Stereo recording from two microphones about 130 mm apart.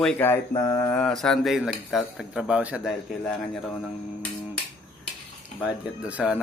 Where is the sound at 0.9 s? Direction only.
5° left (ahead or behind).